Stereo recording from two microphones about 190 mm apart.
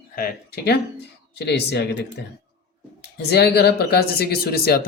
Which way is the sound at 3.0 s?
60° left (ahead or behind).